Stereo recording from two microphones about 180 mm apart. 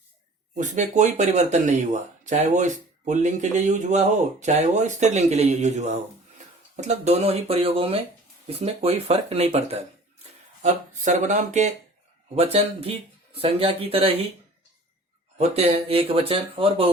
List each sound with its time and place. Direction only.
0.5 s speech: 45° right (ahead or behind)
15.4 s speech: 35° right (ahead or behind)